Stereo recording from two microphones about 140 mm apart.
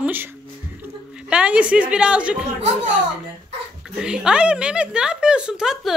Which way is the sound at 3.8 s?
5° right (ahead or behind).